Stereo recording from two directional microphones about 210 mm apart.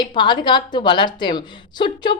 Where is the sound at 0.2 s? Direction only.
20° left (ahead or behind).